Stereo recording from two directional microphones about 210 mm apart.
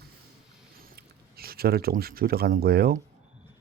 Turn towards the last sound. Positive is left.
turn(degrees=-45)  # may be behind; listen again after turning